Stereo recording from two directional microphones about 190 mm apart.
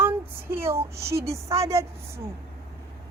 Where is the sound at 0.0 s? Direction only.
10° right (ahead or behind).